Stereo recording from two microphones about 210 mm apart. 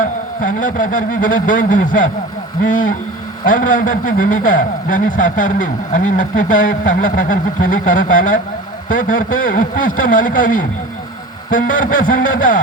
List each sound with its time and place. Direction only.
0.0 s a man's voice: 40° left (ahead or behind)